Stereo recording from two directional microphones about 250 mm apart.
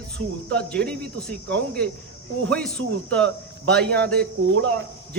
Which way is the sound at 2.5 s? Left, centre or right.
Centre.